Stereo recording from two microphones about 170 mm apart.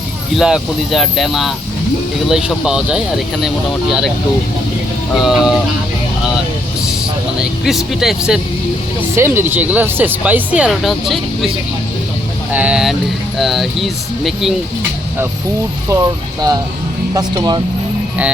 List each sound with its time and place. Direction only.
0.3 s speech: centre (ahead or behind)
5.1 s speech: centre (ahead or behind)
7.3 s speech: 5° right (ahead or behind)
9.1 s speech: 15° right (ahead or behind)
15.9 s speech: 20° right (ahead or behind)